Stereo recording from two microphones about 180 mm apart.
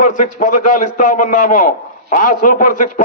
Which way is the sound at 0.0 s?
45° left (ahead or behind).